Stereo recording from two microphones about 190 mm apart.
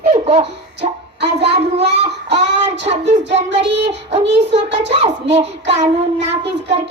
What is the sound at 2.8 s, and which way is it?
Child singing, 35° right (ahead or behind).